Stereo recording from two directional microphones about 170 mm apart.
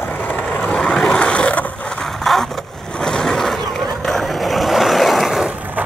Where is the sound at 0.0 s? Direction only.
10° left (ahead or behind).